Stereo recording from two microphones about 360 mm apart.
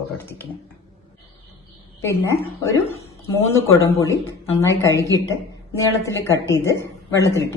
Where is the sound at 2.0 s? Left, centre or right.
Centre.